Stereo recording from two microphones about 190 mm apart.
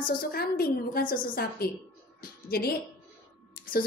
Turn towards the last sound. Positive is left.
turn(degrees=50)  # may be behind; listen again after turning